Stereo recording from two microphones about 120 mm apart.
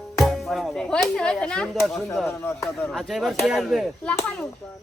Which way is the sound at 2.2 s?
15° left (ahead or behind).